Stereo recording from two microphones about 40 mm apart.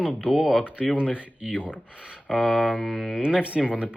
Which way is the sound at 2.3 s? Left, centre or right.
Centre.